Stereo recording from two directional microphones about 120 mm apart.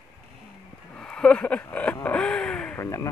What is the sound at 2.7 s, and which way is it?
Speech, 25° left (ahead or behind).